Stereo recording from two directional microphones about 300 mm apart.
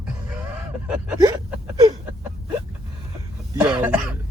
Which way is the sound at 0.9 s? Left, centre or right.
Centre.